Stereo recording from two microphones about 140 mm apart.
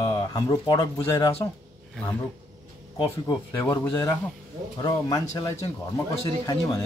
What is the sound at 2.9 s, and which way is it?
Speech, 25° left (ahead or behind).